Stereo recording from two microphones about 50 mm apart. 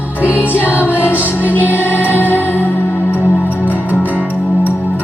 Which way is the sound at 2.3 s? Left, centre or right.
Left.